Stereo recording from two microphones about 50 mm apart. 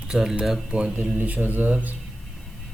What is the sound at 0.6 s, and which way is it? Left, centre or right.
Speech, centre.